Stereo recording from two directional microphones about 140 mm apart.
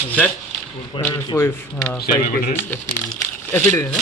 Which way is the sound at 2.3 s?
90° left.